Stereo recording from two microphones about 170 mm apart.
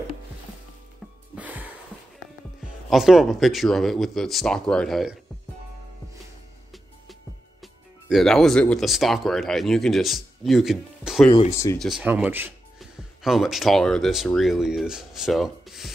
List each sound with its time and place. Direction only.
1.3 s music: 10° right (ahead or behind)
2.9 s speech: centre (ahead or behind)
7.6 s speech: centre (ahead or behind)
11.5 s speech: 15° left (ahead or behind)
11.8 s speech: 5° right (ahead or behind)